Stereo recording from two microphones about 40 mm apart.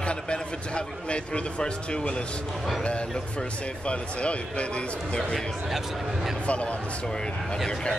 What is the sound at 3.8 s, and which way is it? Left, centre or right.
Speech, left.